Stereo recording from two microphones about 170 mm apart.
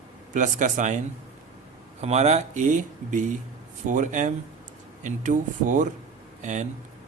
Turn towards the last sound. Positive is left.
turn(degrees=-45)  # may be behind; listen again after turning